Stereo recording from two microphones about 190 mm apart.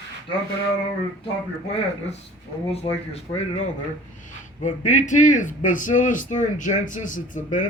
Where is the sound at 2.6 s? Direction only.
30° left (ahead or behind).